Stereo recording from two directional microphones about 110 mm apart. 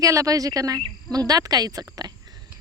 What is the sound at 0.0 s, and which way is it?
Speech, 30° right (ahead or behind).